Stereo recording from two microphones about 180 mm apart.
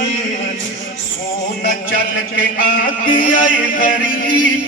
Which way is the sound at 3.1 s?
50° left (ahead or behind).